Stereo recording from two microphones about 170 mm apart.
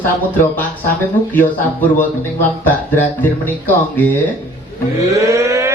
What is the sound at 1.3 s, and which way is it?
Speech, 10° left (ahead or behind).